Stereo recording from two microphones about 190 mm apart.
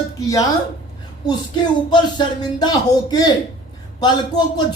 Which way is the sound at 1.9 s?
25° left (ahead or behind).